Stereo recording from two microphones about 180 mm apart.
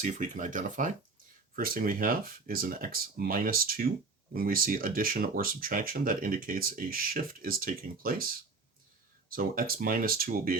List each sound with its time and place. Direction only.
0.0 s speech: 45° right (ahead or behind)